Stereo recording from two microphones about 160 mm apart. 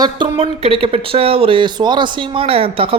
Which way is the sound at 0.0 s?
30° right (ahead or behind).